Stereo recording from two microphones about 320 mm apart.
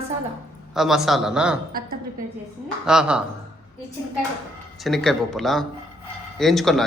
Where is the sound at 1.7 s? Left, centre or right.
Right.